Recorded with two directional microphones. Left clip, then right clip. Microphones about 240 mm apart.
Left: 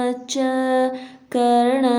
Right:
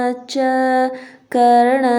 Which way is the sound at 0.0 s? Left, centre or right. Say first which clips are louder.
Right 4 dB; centre.